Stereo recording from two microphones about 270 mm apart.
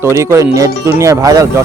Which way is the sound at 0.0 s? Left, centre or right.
Centre.